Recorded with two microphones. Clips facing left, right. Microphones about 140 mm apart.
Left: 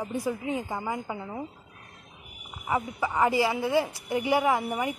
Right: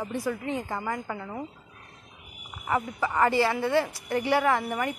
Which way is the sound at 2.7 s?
10° left (ahead or behind).